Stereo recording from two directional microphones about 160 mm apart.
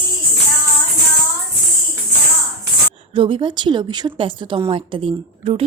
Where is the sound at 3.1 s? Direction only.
30° right (ahead or behind).